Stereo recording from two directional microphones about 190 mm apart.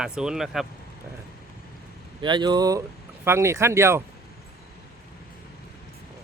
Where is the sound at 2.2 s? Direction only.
25° right (ahead or behind).